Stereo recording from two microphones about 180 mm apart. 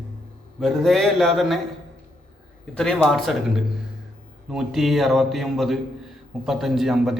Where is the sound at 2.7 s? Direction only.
5° left (ahead or behind).